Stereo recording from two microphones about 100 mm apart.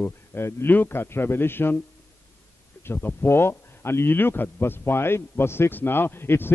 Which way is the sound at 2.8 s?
20° left (ahead or behind).